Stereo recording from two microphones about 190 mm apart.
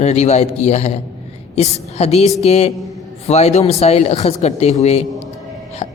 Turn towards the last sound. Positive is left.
turn(degrees=35)  # may be behind; listen again after turning